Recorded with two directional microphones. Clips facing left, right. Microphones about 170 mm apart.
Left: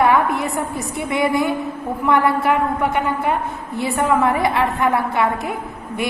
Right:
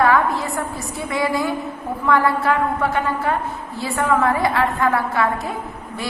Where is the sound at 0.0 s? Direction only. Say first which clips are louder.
Left 1 dB; 20° left (ahead or behind).